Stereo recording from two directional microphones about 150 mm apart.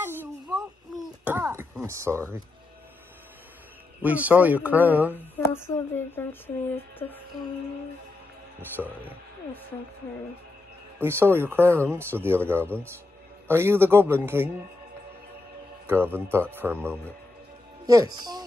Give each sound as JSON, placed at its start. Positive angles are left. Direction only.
{"t": 0.0, "sound": "a sound", "side_deg": -15}
{"t": 1.2, "sound": "speech", "side_deg": -15}
{"t": 4.0, "sound": "speech", "side_deg": -10}
{"t": 5.1, "sound": "speech", "side_deg": 15}
{"t": 8.8, "sound": "speech", "side_deg": -5}
{"t": 11.0, "sound": "speech", "side_deg": -15}
{"t": 15.9, "sound": "speech", "side_deg": -15}
{"t": 17.8, "sound": "speech", "side_deg": -25}